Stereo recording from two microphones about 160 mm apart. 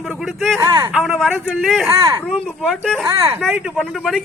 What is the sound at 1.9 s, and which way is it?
Speech, 20° right (ahead or behind).